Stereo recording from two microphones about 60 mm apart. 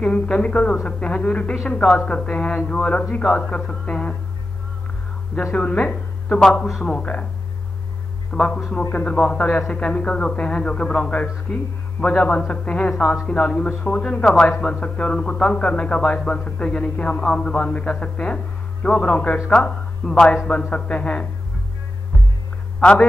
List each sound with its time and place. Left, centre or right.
0.0 s a man's voice: centre
5.6 s a woman's voice: centre
8.3 s a man's voice: centre
22.8 s a man's voice: centre